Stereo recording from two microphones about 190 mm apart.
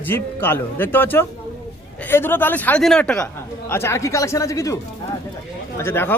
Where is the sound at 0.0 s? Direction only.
10° left (ahead or behind).